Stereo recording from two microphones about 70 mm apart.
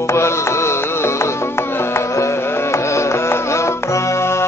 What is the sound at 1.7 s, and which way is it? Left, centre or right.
Carnatic music, left.